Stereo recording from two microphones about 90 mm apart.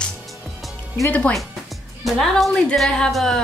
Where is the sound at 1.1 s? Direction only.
15° left (ahead or behind).